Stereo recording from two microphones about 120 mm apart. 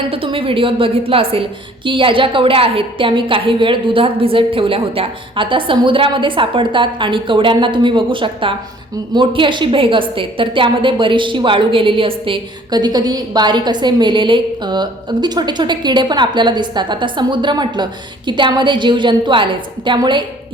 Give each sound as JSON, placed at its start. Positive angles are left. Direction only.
{"t": 0.1, "sound": "a woman's voice", "side_deg": -50}